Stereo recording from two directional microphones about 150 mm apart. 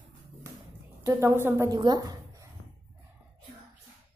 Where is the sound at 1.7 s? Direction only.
30° right (ahead or behind).